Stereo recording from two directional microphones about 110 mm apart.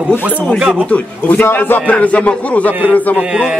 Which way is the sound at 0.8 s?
15° left (ahead or behind).